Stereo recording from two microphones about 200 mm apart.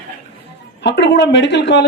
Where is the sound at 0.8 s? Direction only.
60° left (ahead or behind).